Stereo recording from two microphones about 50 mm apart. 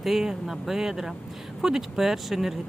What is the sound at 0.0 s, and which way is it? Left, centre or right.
Speech, centre.